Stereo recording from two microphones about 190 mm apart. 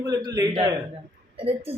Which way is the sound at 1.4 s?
30° right (ahead or behind).